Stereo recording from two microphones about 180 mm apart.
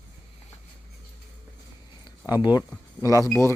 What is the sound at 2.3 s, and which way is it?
Speech, 25° left (ahead or behind).